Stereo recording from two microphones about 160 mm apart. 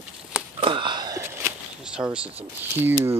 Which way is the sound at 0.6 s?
30° right (ahead or behind).